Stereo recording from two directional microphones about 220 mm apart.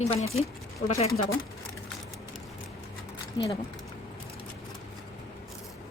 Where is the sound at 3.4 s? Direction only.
20° left (ahead or behind).